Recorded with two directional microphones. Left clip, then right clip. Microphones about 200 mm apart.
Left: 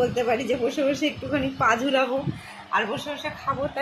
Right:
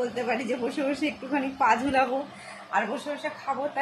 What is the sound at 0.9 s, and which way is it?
A woman's voice, 10° right (ahead or behind).